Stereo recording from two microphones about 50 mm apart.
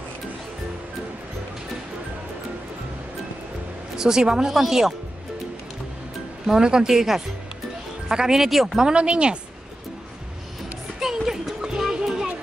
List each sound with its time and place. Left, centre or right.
3.9 s speech: centre
6.4 s speech: centre
8.8 s speech: right
11.0 s music: centre